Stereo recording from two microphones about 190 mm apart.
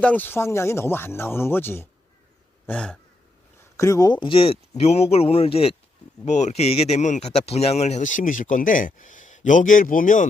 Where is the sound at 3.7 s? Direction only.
15° left (ahead or behind).